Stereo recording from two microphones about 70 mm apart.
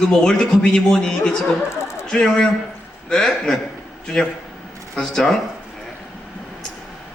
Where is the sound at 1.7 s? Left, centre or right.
Left.